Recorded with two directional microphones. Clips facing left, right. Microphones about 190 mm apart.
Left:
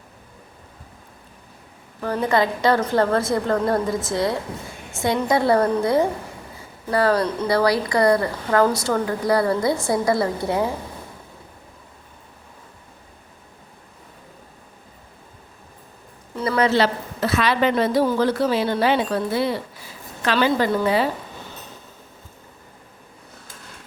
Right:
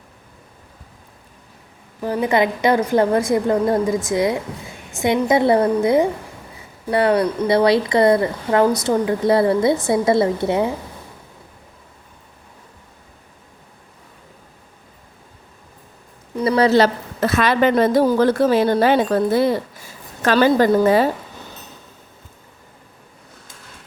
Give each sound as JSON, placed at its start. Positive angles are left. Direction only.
{"t": 2.0, "sound": "a woman's voice", "side_deg": -15}
{"t": 16.3, "sound": "a sound", "side_deg": -20}
{"t": 16.6, "sound": "a woman's voice", "side_deg": -40}